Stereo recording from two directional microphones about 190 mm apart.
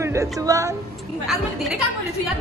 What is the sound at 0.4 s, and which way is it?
Speech, 15° right (ahead or behind).